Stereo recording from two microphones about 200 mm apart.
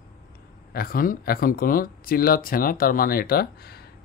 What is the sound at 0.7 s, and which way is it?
Speech, 45° left (ahead or behind).